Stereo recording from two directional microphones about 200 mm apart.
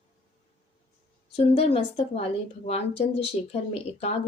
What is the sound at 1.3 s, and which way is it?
Speech, 30° left (ahead or behind).